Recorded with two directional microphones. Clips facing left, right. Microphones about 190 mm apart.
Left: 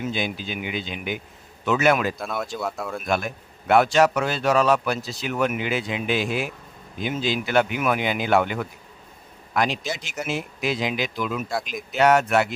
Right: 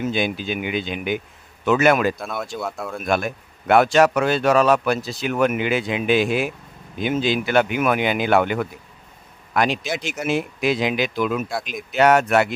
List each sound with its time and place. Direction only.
0.1 s a man's voice: 60° right (ahead or behind)
2.1 s speech: centre (ahead or behind)
3.1 s a man's voice: 60° right (ahead or behind)